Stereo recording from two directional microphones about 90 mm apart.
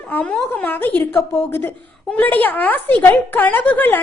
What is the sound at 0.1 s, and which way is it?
A woman's voice, 15° left (ahead or behind).